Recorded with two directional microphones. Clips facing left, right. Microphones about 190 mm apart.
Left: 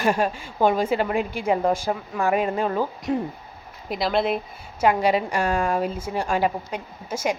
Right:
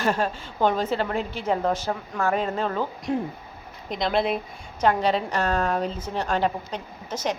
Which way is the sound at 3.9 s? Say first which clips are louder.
Left 1 dB; 5° left (ahead or behind).